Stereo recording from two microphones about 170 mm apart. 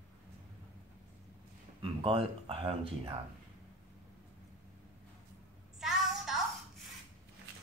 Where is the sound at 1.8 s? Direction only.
35° right (ahead or behind).